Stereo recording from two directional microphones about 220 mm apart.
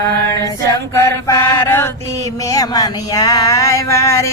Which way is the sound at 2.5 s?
15° left (ahead or behind).